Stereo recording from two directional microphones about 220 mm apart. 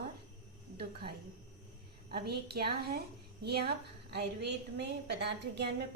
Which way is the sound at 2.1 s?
45° right (ahead or behind).